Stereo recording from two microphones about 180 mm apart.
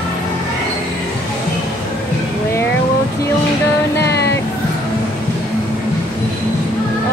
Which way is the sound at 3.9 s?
65° left (ahead or behind).